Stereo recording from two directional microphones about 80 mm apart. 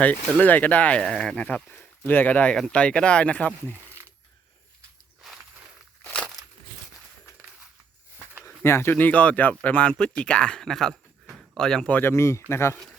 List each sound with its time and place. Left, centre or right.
0.0 s speech: centre
1.0 s speech: centre
6.1 s crushing: centre
8.4 s speech: left; by 11.9 s centre
11.9 s speech: left
12.1 s speech: left